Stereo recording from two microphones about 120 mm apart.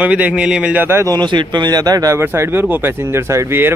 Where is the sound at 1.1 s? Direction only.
40° right (ahead or behind).